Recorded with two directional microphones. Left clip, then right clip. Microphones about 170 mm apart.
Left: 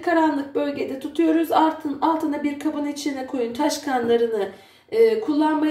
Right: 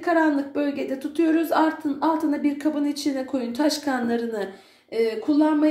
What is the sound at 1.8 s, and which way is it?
Speech, 40° right (ahead or behind).